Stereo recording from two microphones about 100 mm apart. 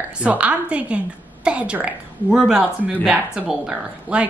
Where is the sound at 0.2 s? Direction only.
15° right (ahead or behind).